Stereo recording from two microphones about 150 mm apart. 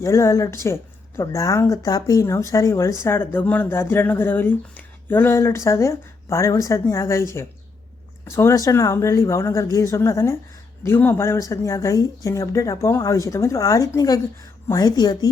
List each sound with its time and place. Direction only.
0.0 s a woman's voice: 20° left (ahead or behind)
8.3 s a woman's voice: 20° left (ahead or behind)